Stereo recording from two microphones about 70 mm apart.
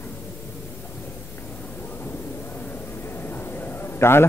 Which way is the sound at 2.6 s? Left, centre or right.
Left.